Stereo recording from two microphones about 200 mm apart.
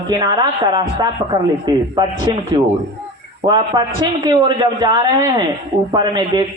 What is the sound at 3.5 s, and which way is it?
A woman's voice, 20° right (ahead or behind).